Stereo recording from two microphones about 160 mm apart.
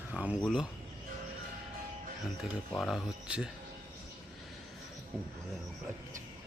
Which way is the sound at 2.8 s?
Centre (ahead or behind).